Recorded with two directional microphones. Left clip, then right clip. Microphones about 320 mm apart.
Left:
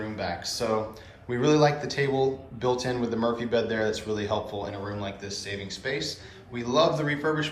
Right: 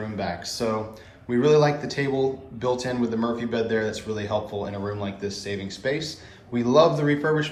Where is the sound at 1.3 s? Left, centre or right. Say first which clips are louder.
Right 3 dB; centre.